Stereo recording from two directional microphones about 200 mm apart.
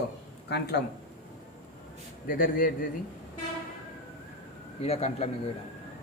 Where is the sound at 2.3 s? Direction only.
45° left (ahead or behind).